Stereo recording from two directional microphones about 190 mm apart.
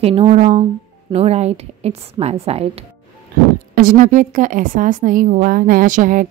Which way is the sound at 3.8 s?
45° right (ahead or behind).